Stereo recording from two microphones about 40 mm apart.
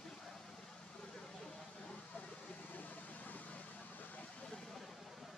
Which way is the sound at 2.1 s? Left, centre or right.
Left.